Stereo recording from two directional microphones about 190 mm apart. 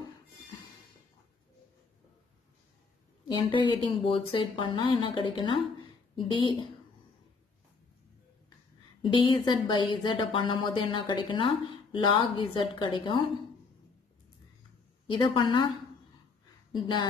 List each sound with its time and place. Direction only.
3.3 s speech: 25° left (ahead or behind)
9.0 s speech: 25° left (ahead or behind)
15.0 s speech: 25° left (ahead or behind)
16.7 s speech: 25° left (ahead or behind)